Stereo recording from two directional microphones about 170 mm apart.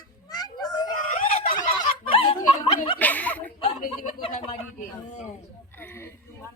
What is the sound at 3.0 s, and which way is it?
Chuckle, 10° left (ahead or behind).